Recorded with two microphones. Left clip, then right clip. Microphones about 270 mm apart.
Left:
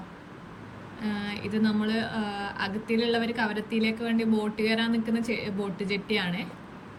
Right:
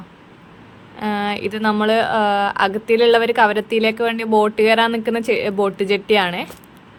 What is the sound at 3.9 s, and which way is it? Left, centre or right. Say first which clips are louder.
A woman's voice: right 11 dB; centre.